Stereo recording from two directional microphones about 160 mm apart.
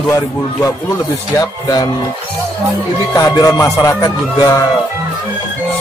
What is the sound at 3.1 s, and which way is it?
Speech, 20° left (ahead or behind).